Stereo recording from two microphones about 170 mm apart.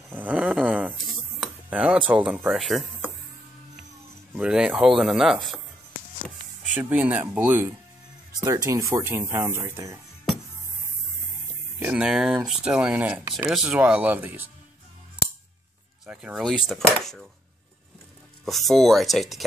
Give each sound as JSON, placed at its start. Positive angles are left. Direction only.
{"t": 0.1, "sound": "a sound", "side_deg": -10}
{"t": 4.3, "sound": "speech", "side_deg": -5}
{"t": 6.7, "sound": "speech", "side_deg": -10}
{"t": 11.8, "sound": "speech", "side_deg": -5}
{"t": 16.1, "sound": "speech", "side_deg": -5}
{"t": 18.4, "sound": "speech", "side_deg": 0}